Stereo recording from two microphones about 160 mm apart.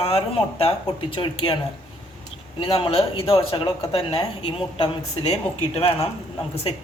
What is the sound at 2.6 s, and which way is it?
Speech, 35° left (ahead or behind).